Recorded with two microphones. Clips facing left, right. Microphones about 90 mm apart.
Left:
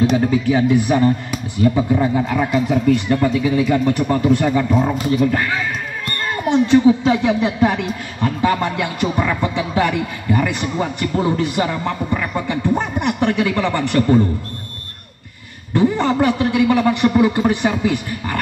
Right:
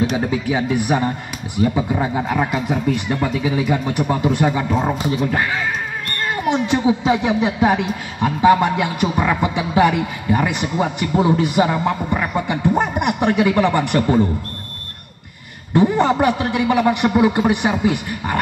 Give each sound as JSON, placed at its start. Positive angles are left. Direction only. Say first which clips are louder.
{"t": 0.3, "sound": "speech", "louder": "left 4 dB", "side_deg": -15}
{"t": 6.5, "sound": "speech", "louder": "left 6 dB", "side_deg": -15}
{"t": 15.7, "sound": "speech", "louder": "right 1 dB", "side_deg": -15}